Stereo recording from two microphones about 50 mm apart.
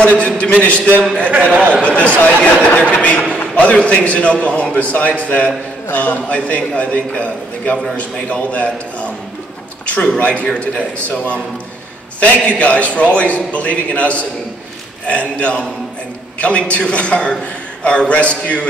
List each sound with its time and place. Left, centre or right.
0.0 s a man's voice: left
1.5 s speech: right
1.9 s a man's voice: left